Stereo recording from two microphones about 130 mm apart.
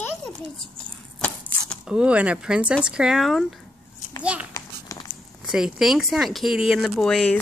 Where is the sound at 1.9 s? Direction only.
10° right (ahead or behind).